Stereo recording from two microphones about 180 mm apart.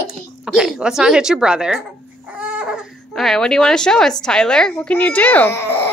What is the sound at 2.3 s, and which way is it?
Chicken, 5° right (ahead or behind).